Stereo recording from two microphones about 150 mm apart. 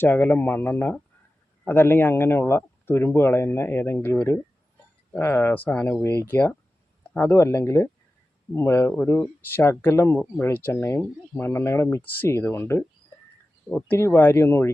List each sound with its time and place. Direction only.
0.0 s speech: 10° left (ahead or behind)